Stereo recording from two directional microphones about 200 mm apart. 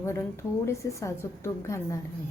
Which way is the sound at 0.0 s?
15° left (ahead or behind).